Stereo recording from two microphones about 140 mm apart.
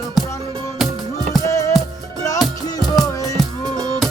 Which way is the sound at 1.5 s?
20° left (ahead or behind).